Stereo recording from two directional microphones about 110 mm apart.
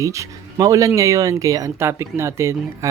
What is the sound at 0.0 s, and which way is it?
Speech, 30° right (ahead or behind).